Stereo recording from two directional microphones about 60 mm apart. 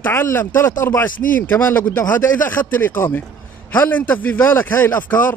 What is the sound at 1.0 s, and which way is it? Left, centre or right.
A man's voice, left.